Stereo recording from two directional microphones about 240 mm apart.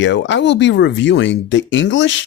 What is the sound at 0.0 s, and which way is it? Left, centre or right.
Speech, left.